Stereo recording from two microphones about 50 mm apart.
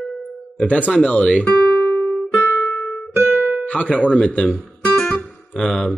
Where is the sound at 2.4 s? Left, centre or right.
Left.